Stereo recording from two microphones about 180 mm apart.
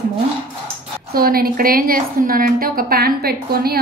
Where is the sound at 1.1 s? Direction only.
55° right (ahead or behind).